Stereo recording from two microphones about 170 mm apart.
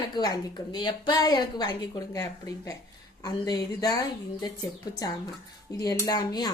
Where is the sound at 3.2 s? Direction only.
20° left (ahead or behind).